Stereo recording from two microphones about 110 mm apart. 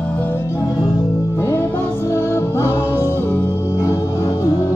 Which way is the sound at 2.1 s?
25° left (ahead or behind).